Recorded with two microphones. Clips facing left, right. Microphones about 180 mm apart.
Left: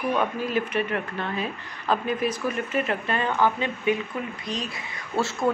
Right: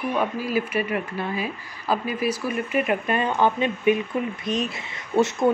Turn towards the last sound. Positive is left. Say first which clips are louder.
# right 5 dB
turn(degrees=-20)  # may be behind; listen again after turning